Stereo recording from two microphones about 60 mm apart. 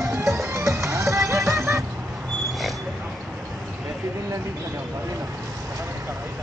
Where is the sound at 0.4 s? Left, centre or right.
Right.